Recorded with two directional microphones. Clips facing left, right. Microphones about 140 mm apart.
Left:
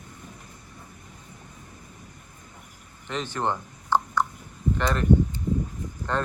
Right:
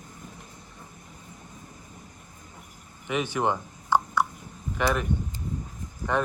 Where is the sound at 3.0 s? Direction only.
10° right (ahead or behind).